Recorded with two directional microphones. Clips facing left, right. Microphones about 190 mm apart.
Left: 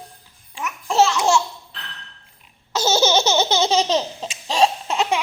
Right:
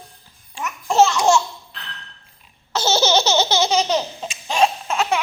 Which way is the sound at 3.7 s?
25° left (ahead or behind).